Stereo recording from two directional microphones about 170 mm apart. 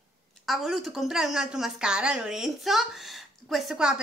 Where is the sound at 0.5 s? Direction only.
Centre (ahead or behind).